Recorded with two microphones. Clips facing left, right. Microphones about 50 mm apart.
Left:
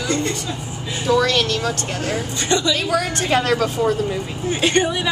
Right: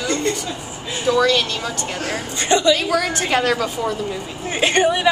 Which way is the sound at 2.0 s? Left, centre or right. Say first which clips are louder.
Even; right.